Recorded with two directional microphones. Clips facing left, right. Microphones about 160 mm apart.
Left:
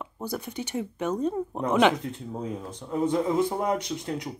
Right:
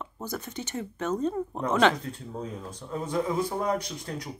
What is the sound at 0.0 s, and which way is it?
Speech, 10° left (ahead or behind).